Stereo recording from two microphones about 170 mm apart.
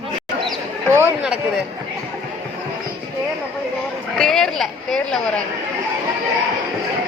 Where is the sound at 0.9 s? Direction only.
15° right (ahead or behind).